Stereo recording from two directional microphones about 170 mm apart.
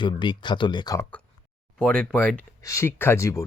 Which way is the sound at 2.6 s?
15° left (ahead or behind).